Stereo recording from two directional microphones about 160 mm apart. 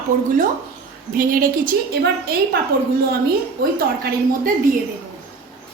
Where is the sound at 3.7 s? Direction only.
65° right (ahead or behind).